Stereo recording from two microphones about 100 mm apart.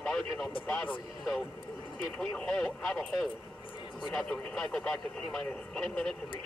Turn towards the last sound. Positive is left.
turn(degrees=5)  # may be behind; listen again after turning